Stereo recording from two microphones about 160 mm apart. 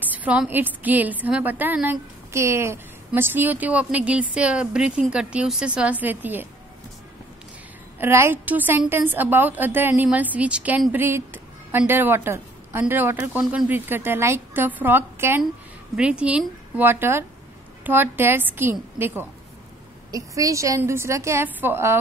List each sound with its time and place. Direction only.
0.0 s a woman's voice: 10° right (ahead or behind)
8.0 s a woman's voice: 15° right (ahead or behind)